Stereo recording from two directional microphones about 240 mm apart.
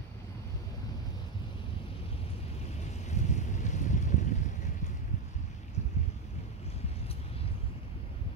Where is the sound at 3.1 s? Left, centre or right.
Left.